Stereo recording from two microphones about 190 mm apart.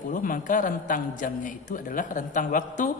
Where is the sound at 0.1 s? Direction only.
45° left (ahead or behind).